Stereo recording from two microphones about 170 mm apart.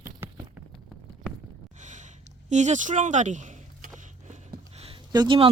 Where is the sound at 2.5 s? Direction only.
45° right (ahead or behind).